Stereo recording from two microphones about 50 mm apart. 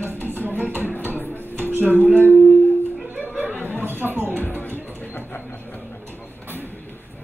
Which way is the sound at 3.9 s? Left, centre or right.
Right.